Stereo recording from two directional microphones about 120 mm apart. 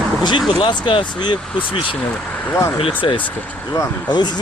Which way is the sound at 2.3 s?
20° left (ahead or behind).